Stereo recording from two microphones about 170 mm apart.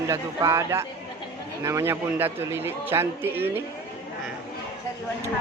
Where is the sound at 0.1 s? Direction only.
15° right (ahead or behind).